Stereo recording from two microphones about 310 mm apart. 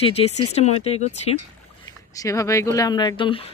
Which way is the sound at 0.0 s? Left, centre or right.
Centre.